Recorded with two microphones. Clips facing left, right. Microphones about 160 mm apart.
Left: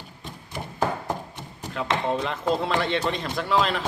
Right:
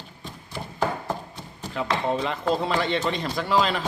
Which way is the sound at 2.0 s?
Centre (ahead or behind).